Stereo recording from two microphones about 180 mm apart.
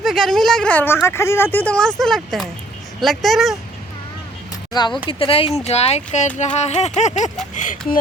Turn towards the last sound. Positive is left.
turn(degrees=45)  # may be behind; listen again after turning